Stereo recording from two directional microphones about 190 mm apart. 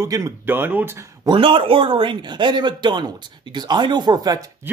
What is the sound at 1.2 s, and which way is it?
Speech, 25° right (ahead or behind).